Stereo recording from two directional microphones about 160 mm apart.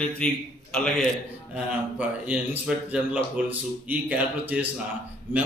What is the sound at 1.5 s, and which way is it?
Speech, 10° right (ahead or behind).